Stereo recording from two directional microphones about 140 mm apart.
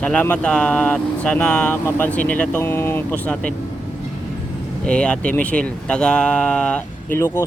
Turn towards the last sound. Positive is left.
turn(degrees=20)  # may be behind; listen again after turning